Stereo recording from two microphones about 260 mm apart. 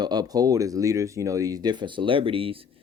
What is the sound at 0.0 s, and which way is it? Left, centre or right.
Speech, centre.